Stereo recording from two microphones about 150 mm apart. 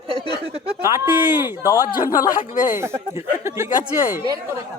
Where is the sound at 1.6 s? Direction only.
25° left (ahead or behind).